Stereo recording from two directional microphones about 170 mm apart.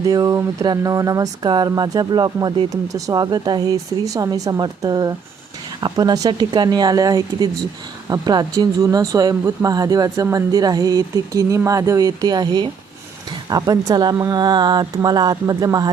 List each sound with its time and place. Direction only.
0.0 s speech: 20° right (ahead or behind)